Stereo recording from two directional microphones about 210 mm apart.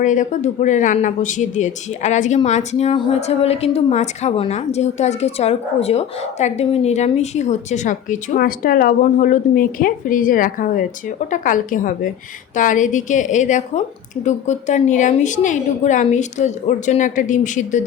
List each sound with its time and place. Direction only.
0.0 s speech: 35° left (ahead or behind)